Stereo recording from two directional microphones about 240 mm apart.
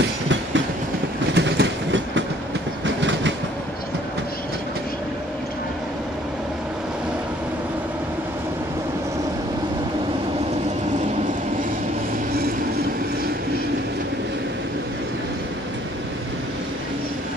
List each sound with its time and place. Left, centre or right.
0.3 s train: right